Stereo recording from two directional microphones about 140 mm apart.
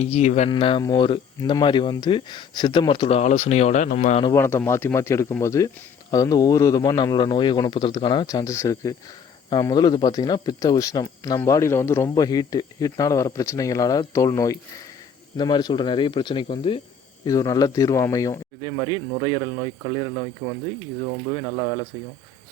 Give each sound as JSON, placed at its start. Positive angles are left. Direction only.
{"t": 0.0, "sound": "speech", "side_deg": 50}
{"t": 0.5, "sound": "speech", "side_deg": 35}
{"t": 4.4, "sound": "speech", "side_deg": 20}
{"t": 17.2, "sound": "speech", "side_deg": 25}
{"t": 18.6, "sound": "speech", "side_deg": -35}
{"t": 20.4, "sound": "speech", "side_deg": 10}